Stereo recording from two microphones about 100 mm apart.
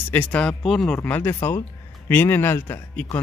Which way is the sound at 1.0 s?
20° left (ahead or behind).